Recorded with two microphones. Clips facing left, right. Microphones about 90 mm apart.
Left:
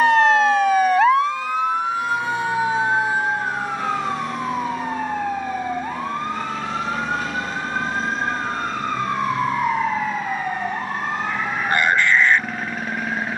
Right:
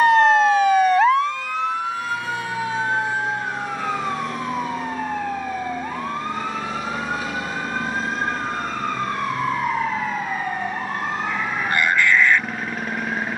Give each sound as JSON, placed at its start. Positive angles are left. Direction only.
{"t": 0.0, "sound": "emergency vehicle", "side_deg": 0}
{"t": 2.6, "sound": "emergency vehicle", "side_deg": 10}
{"t": 11.7, "sound": "a sound", "side_deg": 30}